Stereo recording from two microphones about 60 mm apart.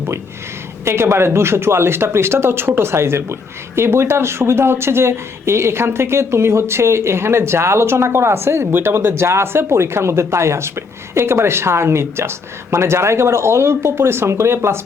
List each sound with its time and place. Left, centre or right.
0.9 s speech: right